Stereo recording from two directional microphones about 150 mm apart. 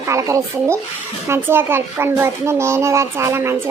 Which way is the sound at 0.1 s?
20° right (ahead or behind).